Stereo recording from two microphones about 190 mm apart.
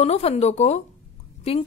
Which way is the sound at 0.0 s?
35° left (ahead or behind).